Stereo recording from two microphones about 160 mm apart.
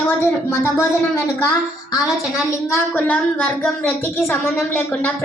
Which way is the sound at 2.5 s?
15° left (ahead or behind).